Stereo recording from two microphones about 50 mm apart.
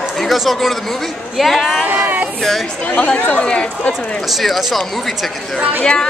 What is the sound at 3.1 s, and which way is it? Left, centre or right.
Speech, left.